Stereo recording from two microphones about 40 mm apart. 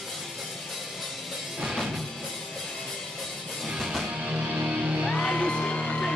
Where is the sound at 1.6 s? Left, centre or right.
Centre.